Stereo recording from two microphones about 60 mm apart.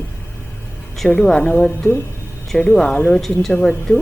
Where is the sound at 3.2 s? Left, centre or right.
Centre.